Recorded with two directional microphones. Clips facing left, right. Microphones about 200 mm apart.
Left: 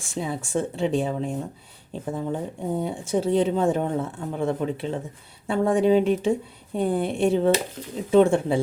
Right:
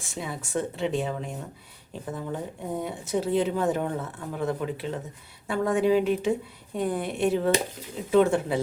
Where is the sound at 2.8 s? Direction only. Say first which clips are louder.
Left 3 dB; 30° left (ahead or behind).